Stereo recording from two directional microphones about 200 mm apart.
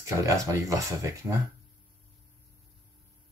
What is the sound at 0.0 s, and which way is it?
Speech, 15° right (ahead or behind).